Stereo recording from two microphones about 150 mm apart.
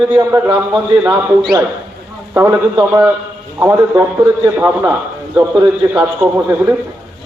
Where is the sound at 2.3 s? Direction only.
15° right (ahead or behind).